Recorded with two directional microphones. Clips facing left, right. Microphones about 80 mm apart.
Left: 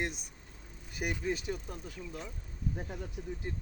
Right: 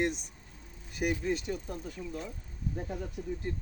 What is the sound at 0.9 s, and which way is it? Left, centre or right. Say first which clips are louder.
Speech: right 4 dB; centre.